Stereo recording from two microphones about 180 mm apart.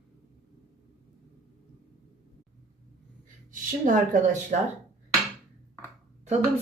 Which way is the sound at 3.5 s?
45° right (ahead or behind).